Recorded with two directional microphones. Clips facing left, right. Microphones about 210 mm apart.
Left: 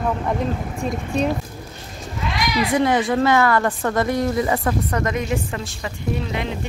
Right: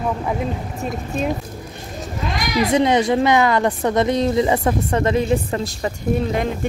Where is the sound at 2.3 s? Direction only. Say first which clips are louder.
Right 2 dB; 45° right (ahead or behind).